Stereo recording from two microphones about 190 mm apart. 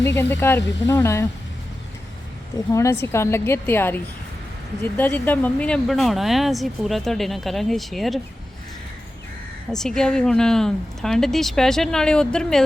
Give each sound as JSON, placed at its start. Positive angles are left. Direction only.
{"t": 0.0, "sound": "speech", "side_deg": 10}
{"t": 2.7, "sound": "speech", "side_deg": 15}
{"t": 9.7, "sound": "speech", "side_deg": 5}